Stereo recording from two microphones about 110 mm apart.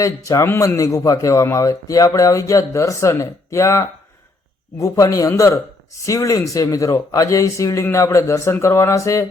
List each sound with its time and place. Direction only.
0.0 s a man's voice: 30° left (ahead or behind)